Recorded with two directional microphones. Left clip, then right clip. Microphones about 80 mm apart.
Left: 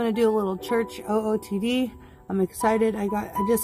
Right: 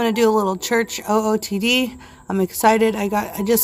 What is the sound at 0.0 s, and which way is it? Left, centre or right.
Speech, left.